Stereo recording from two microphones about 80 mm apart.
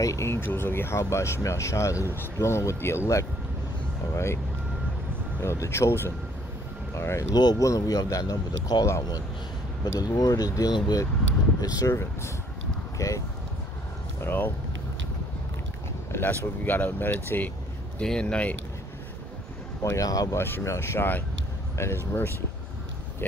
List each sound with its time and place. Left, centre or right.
0.0 s speech: left
5.4 s speech: left
7.3 s speech: left
7.6 s speech: left
9.9 s speech: left
11.9 s speech: left
14.2 s speech: left
16.1 s a sound: left
16.6 s speech: left
17.9 s speech: centre
19.8 s speech: left
20.3 s speech: left